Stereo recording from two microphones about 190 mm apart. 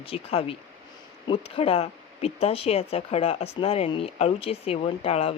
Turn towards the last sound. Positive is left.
turn(degrees=30)  # may be behind; listen again after turning